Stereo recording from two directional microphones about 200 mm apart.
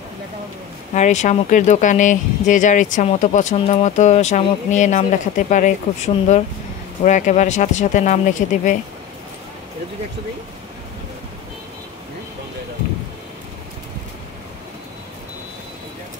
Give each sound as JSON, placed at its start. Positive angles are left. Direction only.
{"t": 0.9, "sound": "speech", "side_deg": 35}